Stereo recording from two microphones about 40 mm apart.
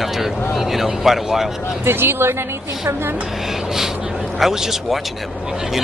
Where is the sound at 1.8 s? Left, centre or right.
Right.